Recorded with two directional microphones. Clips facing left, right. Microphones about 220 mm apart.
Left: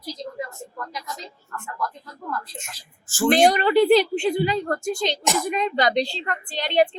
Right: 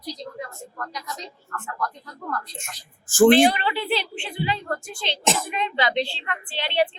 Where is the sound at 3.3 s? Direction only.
45° left (ahead or behind).